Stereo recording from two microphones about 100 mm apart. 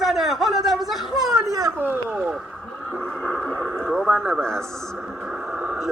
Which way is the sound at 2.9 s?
10° left (ahead or behind).